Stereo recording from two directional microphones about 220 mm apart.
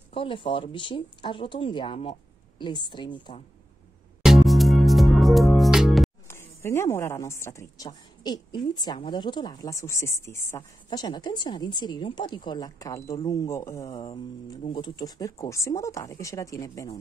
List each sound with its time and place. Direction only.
0.1 s speech: 25° left (ahead or behind)
4.2 s music: centre (ahead or behind)
6.2 s a woman's voice: 10° left (ahead or behind)
13.8 s a woman's voice: 25° left (ahead or behind)